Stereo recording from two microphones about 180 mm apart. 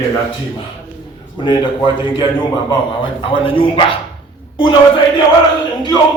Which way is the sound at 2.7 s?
25° left (ahead or behind).